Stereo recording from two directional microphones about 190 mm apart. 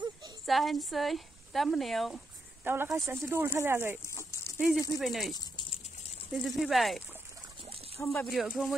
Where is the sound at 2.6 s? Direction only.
10° right (ahead or behind).